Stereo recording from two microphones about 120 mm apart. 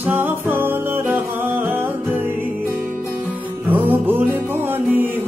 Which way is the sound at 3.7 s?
15° right (ahead or behind).